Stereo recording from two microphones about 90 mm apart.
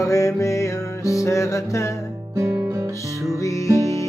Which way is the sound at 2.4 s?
35° right (ahead or behind).